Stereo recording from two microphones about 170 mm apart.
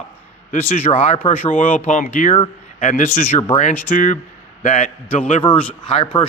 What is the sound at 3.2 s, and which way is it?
Speech, 45° left (ahead or behind).